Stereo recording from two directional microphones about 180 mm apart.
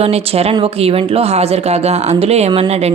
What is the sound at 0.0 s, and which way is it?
A woman's voice, 35° right (ahead or behind).